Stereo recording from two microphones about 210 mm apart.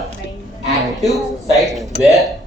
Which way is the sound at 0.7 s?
Centre (ahead or behind).